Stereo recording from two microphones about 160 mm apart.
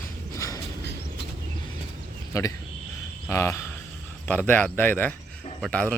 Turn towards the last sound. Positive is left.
turn(degrees=5)  # may be behind; listen again after turning